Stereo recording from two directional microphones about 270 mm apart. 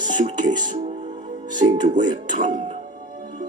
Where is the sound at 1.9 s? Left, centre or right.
Centre.